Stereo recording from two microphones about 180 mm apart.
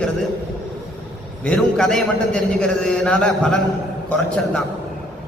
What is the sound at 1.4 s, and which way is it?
A man's voice, 5° left (ahead or behind).